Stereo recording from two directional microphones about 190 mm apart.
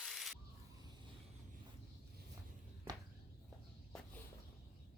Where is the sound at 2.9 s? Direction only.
20° right (ahead or behind).